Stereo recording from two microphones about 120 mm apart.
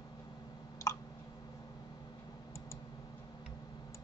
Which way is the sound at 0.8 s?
25° left (ahead or behind).